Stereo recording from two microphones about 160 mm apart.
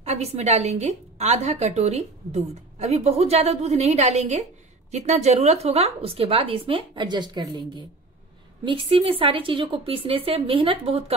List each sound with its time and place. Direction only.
0.0 s a woman's voice: 40° right (ahead or behind)